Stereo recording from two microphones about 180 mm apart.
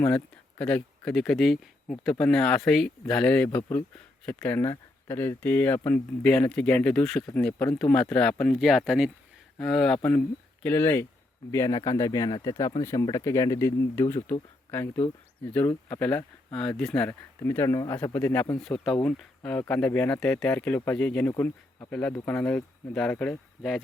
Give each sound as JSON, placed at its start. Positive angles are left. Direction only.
{"t": 0.6, "sound": "speech", "side_deg": 5}